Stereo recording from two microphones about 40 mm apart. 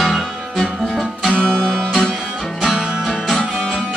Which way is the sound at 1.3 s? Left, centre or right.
Left.